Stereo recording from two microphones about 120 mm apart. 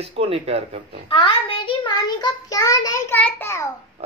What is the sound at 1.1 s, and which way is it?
A child's voice, 45° left (ahead or behind).